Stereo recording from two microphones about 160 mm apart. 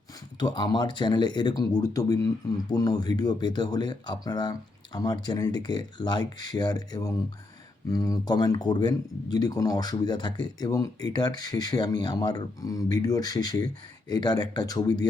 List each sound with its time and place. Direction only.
0.3 s speech: 25° left (ahead or behind)